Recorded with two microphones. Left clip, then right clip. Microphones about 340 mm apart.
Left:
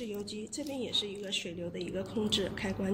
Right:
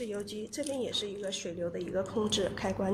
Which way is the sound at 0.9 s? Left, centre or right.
Right.